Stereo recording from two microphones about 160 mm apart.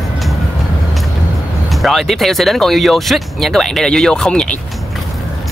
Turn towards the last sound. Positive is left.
turn(degrees=5)  # may be behind; listen again after turning